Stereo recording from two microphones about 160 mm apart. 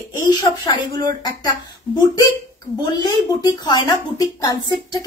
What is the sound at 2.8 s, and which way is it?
A woman's voice, 25° left (ahead or behind).